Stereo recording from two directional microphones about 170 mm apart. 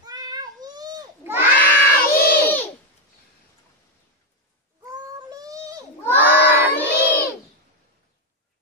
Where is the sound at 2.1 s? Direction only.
60° left (ahead or behind).